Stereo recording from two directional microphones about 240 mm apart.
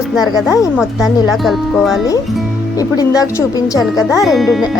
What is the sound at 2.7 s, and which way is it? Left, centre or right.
Speech, centre.